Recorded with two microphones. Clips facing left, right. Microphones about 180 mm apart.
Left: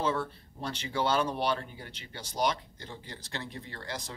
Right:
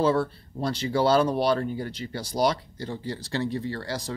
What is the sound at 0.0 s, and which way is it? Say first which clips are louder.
Speech: right 8 dB; 35° right (ahead or behind).